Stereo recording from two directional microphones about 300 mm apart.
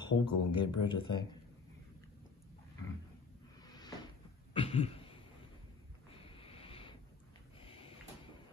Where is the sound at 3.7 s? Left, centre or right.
Centre.